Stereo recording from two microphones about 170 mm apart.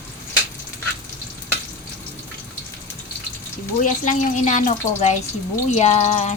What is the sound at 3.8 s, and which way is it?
Speech, 50° left (ahead or behind).